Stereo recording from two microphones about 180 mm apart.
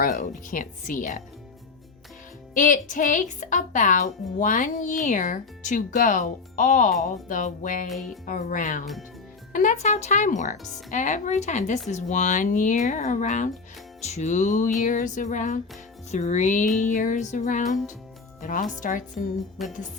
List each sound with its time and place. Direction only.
0.0 s a woman's voice: 50° left (ahead or behind)
2.6 s a woman's voice: 45° left (ahead or behind)
7.9 s music: centre (ahead or behind)
8.3 s a woman's voice: 45° left (ahead or behind)
19.6 s music: centre (ahead or behind)